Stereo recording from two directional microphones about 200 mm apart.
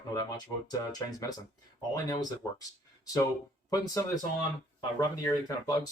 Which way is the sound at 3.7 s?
15° left (ahead or behind).